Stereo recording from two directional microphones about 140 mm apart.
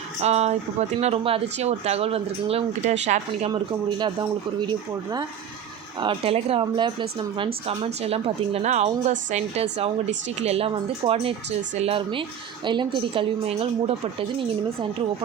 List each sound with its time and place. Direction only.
0.2 s a woman's voice: 50° right (ahead or behind)
3.5 s a woman's voice: 30° right (ahead or behind)
6.0 s a woman's voice: 40° right (ahead or behind)